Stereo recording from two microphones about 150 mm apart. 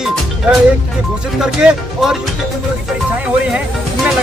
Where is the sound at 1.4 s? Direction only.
5° right (ahead or behind).